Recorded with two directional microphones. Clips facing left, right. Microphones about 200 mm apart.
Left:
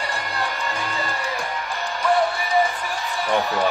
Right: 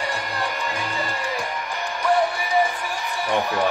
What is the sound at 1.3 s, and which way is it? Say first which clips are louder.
Music: even; 15° right (ahead or behind).